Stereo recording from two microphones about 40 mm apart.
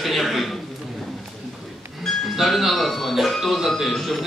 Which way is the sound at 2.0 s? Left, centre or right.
Centre.